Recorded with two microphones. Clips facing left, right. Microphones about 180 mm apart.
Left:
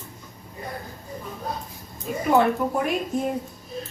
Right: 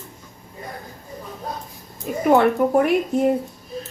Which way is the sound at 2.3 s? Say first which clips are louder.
Right 4 dB; 65° right (ahead or behind).